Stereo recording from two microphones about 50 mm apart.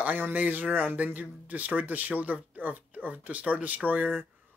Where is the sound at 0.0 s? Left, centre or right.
Right.